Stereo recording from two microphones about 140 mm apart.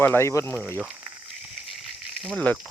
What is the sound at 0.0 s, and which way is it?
Speech, 15° left (ahead or behind).